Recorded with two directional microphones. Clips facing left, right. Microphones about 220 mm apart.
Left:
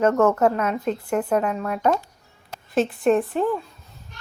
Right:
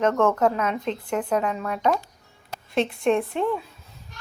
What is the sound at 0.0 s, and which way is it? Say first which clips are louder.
A woman's voice: left 2 dB; 5° left (ahead or behind).